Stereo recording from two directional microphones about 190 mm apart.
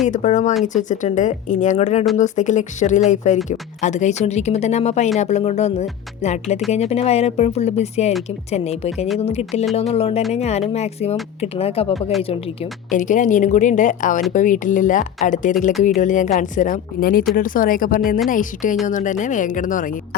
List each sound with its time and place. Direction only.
0.1 s speech: 40° left (ahead or behind)
12.9 s speech: 40° left (ahead or behind)